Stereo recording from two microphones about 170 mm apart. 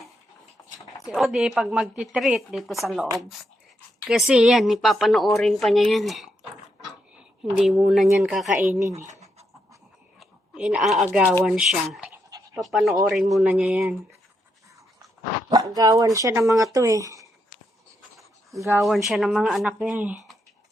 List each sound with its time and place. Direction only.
1.1 s speech: centre (ahead or behind)
7.6 s speech: centre (ahead or behind)
8.8 s speech: 20° right (ahead or behind)
10.2 s speech: 5° right (ahead or behind)
15.4 s speech: 20° right (ahead or behind)
18.8 s speech: centre (ahead or behind)